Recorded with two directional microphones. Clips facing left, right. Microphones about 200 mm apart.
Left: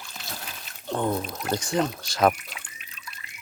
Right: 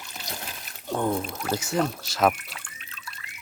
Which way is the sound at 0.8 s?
10° right (ahead or behind).